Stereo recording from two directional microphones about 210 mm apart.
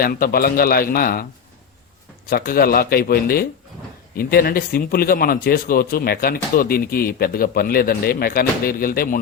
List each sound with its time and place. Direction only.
0.0 s speech: 45° left (ahead or behind)
2.3 s speech: 45° left (ahead or behind)